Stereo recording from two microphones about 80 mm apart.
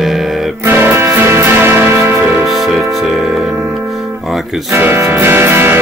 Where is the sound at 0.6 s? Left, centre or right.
Right.